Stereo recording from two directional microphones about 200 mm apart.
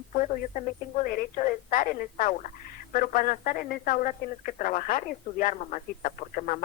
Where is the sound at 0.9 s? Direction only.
40° left (ahead or behind).